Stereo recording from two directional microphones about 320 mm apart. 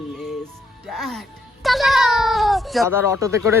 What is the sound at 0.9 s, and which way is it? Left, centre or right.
Music, centre.